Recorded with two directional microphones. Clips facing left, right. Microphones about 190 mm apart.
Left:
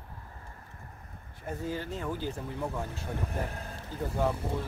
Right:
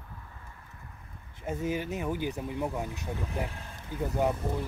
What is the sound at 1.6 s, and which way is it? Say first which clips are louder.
Speech: right 3 dB; 15° right (ahead or behind).